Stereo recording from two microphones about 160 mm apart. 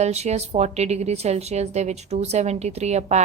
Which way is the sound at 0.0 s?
45° right (ahead or behind).